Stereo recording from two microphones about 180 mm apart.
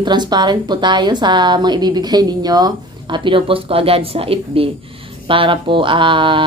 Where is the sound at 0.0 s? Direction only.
25° right (ahead or behind).